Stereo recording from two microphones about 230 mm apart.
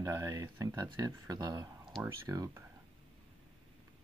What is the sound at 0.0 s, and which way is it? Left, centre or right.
Speech, centre.